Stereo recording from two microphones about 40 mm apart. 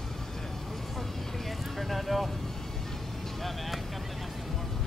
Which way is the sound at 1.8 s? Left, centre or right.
Centre.